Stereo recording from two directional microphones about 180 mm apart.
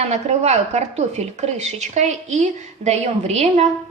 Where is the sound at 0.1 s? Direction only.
40° right (ahead or behind).